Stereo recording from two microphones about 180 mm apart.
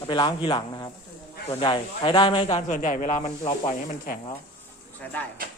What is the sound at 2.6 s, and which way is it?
Speech, 45° left (ahead or behind).